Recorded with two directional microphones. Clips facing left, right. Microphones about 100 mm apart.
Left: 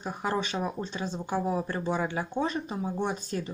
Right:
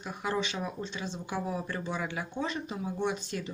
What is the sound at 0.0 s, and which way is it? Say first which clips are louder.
Speech: left 2 dB; 35° left (ahead or behind).